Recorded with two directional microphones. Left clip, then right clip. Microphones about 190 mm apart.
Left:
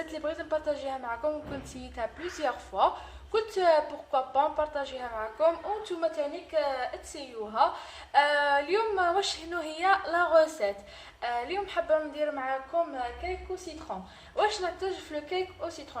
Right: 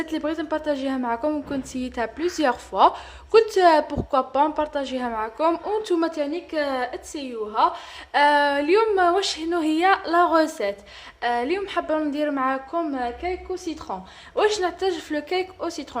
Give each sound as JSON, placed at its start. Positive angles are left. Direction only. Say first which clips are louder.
{"t": 0.1, "sound": "a woman's voice", "louder": "right 4 dB", "side_deg": -40}
{"t": 14.3, "sound": "a woman's voice", "louder": "right 7 dB", "side_deg": -40}